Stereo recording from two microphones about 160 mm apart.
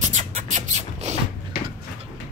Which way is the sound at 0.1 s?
40° right (ahead or behind).